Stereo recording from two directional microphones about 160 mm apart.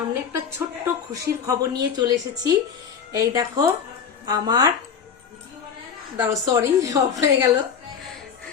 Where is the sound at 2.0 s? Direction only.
25° right (ahead or behind).